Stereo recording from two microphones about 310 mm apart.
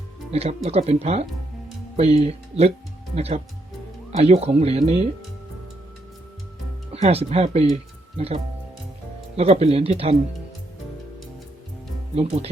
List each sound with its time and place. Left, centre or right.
0.3 s speech: centre
6.9 s speech: centre
9.3 s speech: centre
12.1 s speech: centre